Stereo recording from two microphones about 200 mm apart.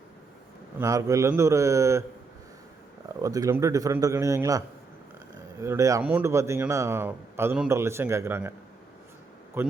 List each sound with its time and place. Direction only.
0.8 s speech: 15° right (ahead or behind)
3.2 s speech: 15° right (ahead or behind)
9.6 s speech: 10° right (ahead or behind)